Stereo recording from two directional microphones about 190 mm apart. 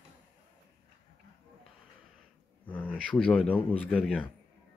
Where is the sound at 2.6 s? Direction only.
10° left (ahead or behind).